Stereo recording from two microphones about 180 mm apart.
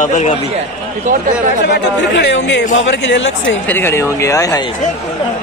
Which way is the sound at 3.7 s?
15° left (ahead or behind).